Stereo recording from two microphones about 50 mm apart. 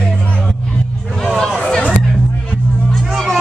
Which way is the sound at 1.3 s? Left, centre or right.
Centre.